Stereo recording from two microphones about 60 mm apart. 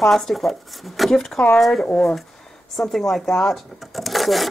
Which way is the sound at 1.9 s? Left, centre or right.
Left.